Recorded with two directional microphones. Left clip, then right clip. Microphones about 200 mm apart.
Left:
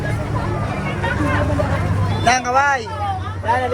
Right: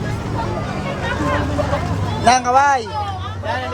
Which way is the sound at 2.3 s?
20° right (ahead or behind).